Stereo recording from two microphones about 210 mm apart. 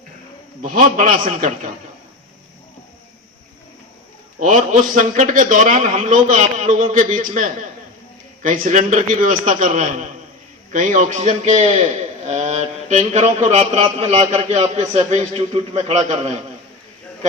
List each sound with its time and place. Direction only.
0.6 s a man's voice: 35° right (ahead or behind)
4.4 s a man's voice: 35° right (ahead or behind)